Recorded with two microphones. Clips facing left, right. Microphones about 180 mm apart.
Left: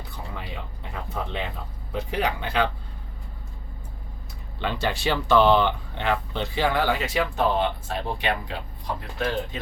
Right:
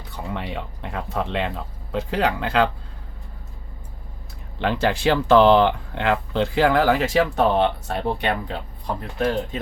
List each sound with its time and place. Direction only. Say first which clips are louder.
0.3 s a sound: right 6 dB; 85° right
1.9 s speech: right 4 dB; 90° right
4.6 s speech: right 6 dB; 90° right
7.3 s speech: right 3 dB; 65° right (ahead or behind)
8.2 s speech: right 3 dB; 55° right (ahead or behind)
9.1 s speech: right 5 dB; 45° right (ahead or behind)